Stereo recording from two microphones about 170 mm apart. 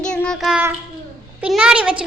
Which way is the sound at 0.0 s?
5° left (ahead or behind).